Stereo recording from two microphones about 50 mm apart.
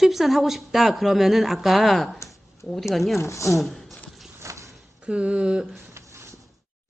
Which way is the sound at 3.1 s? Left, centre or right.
Left.